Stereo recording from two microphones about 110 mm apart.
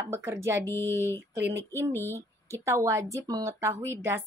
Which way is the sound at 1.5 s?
25° right (ahead or behind).